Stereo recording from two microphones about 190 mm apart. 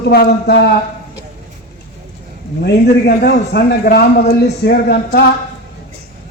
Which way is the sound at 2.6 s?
55° left (ahead or behind).